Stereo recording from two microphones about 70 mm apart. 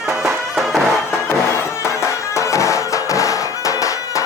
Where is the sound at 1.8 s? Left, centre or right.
Left.